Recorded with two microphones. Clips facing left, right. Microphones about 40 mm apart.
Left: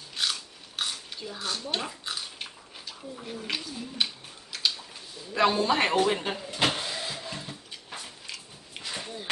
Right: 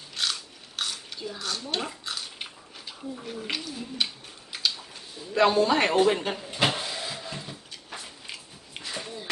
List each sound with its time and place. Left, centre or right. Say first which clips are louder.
0.1 s biting: even; centre
1.4 s speech: left 1 dB; centre
1.8 s speech: right 1 dB; centre
2.3 s a sound: right 1 dB; centre
3.5 s a man's voice: left 1 dB; centre
5.3 s a man's voice: right 3 dB; centre
6.7 s vehicle: right 1 dB; centre
8.3 s a sound: right 1 dB; centre
8.9 s a sound: right 1 dB; centre